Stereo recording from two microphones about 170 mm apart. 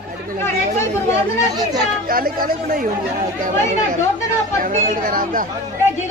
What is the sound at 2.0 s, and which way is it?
Speech, 55° right (ahead or behind).